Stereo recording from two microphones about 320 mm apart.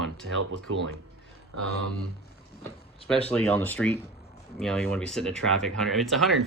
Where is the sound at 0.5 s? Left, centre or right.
Right.